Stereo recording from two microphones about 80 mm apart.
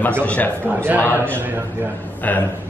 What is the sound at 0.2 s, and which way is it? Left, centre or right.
Speech, centre.